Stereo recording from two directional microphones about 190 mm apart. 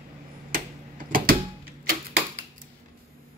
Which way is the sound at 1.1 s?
50° right (ahead or behind).